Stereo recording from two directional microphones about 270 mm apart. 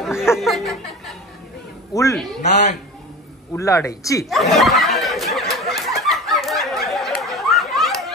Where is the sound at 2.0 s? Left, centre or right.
Centre.